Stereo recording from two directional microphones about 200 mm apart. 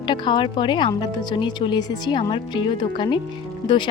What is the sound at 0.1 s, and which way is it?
Speech, 25° left (ahead or behind).